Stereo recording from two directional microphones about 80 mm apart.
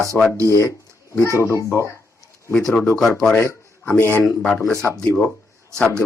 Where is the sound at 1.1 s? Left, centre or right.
Left.